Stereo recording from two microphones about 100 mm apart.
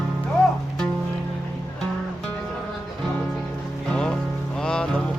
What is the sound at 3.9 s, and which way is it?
Music, 10° left (ahead or behind).